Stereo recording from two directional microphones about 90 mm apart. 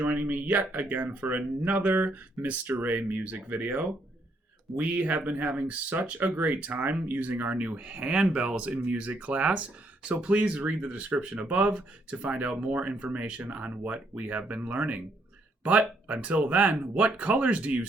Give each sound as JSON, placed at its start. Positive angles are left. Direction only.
{"t": 0.0, "sound": "speech", "side_deg": -20}